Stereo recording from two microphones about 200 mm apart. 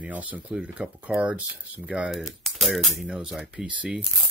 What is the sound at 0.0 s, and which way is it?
Speech, 5° right (ahead or behind).